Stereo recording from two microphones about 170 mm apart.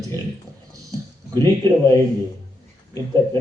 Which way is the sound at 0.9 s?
20° right (ahead or behind).